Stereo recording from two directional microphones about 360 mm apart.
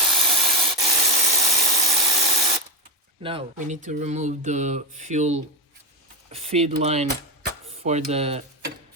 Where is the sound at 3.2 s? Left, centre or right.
Centre.